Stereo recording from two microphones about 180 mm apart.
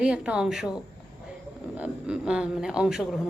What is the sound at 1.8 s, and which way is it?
A woman's voice, 5° right (ahead or behind).